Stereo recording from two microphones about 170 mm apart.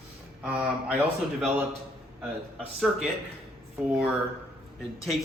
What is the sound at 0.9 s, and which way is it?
Speech, 5° right (ahead or behind).